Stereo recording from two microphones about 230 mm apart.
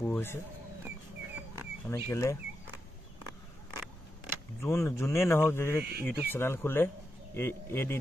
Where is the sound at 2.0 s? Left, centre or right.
Centre.